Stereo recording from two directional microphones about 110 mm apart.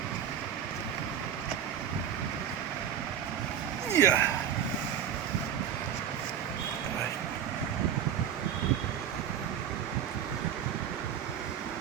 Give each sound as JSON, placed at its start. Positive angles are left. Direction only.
{"t": 3.9, "sound": "speech", "side_deg": 35}